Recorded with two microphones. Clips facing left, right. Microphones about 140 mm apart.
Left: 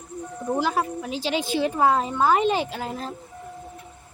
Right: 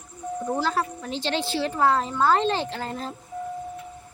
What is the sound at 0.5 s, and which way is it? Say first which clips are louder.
A woman's voice: left 3 dB; 15° left (ahead or behind).